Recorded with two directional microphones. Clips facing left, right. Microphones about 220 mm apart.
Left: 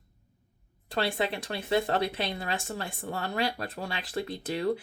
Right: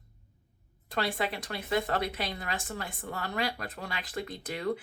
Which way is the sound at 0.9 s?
25° left (ahead or behind).